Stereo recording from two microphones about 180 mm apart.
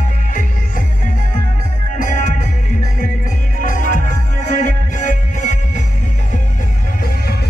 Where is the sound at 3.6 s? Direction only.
45° left (ahead or behind).